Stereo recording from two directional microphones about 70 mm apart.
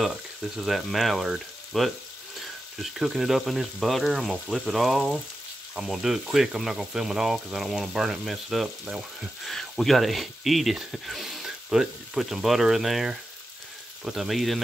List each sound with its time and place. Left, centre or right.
0.0 s speech: centre